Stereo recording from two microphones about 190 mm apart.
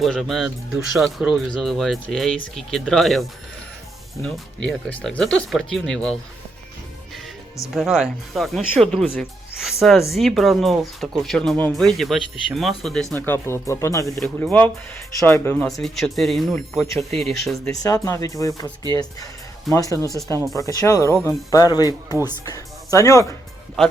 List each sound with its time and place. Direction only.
0.0 s speech: centre (ahead or behind)
7.7 s speech: centre (ahead or behind)
13.1 s speech: 10° left (ahead or behind)
14.2 s speech: 5° left (ahead or behind)
15.8 s speech: centre (ahead or behind)
17.7 s speech: 15° left (ahead or behind)
19.7 s speech: 15° left (ahead or behind)
21.8 s speech: 15° right (ahead or behind)
22.4 s speech: 15° left (ahead or behind)